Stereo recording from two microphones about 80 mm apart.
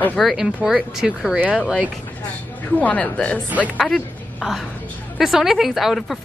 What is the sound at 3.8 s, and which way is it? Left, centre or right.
A woman's voice, centre.